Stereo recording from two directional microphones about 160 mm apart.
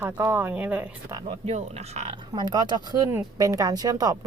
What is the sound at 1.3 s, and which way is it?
Speech, 40° right (ahead or behind).